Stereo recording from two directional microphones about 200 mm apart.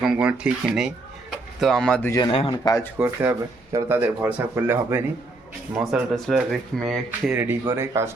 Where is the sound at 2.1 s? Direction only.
20° left (ahead or behind).